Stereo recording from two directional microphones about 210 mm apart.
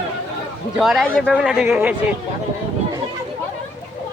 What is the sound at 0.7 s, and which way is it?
Speech, centre (ahead or behind).